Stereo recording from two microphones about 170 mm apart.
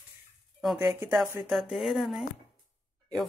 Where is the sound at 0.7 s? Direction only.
10° right (ahead or behind).